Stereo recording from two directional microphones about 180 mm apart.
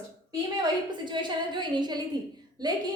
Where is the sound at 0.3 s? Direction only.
25° right (ahead or behind).